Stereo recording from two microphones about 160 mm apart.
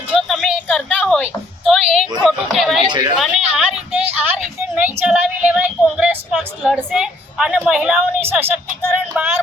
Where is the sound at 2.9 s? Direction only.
25° right (ahead or behind).